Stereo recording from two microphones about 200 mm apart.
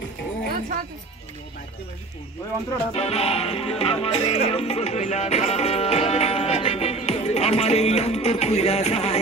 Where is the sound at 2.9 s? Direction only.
30° left (ahead or behind).